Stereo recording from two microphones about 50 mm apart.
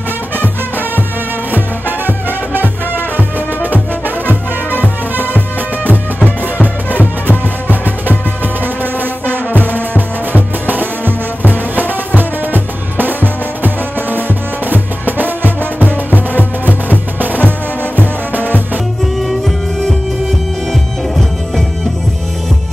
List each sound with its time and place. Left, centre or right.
1.5 s music: right
4.6 s music: left
9.5 s music: left
9.8 s music: right
14.1 s music: right
19.1 s music: centre